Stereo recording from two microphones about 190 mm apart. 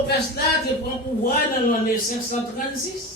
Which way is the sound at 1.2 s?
45° left (ahead or behind).